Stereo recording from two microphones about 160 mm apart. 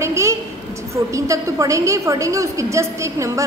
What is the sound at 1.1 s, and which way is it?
A woman's voice, 20° right (ahead or behind).